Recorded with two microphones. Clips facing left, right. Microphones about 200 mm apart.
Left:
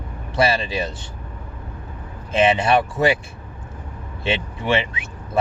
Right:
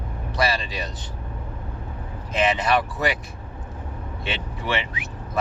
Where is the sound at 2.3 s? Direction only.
25° left (ahead or behind).